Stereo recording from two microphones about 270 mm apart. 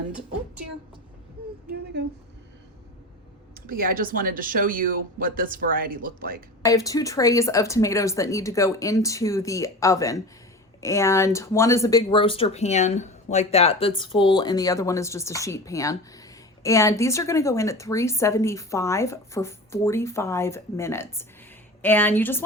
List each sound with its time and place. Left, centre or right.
1.7 s speech: right
3.7 s speech: right
6.6 s speech: centre